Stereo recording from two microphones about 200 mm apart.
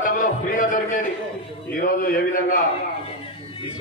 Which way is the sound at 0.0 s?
40° left (ahead or behind).